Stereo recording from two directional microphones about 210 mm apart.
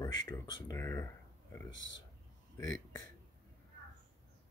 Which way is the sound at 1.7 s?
60° left (ahead or behind).